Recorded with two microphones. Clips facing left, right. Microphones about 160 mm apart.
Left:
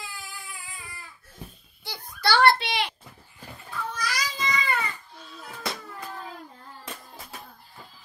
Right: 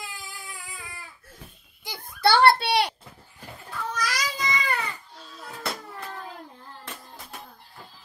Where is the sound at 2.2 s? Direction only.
30° right (ahead or behind).